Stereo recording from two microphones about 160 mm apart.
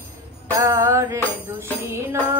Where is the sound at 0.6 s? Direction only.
20° right (ahead or behind).